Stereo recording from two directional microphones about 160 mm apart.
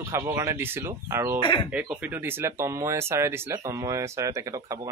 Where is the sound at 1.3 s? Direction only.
30° left (ahead or behind).